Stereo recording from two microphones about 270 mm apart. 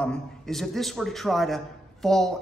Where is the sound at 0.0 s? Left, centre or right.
Centre.